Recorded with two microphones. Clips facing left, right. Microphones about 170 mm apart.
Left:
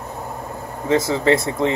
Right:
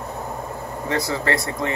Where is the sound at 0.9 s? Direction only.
20° left (ahead or behind).